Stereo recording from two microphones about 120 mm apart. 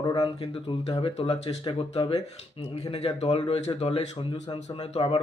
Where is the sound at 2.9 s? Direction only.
60° left (ahead or behind).